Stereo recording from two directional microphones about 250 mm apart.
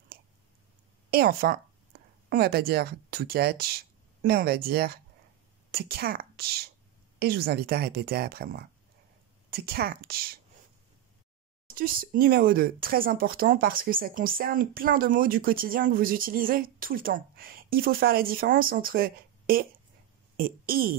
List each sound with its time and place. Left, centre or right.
1.1 s speech: right
11.7 s speech: right